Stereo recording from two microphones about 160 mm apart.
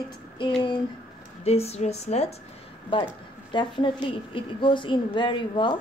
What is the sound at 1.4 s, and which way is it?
Speech, 40° left (ahead or behind).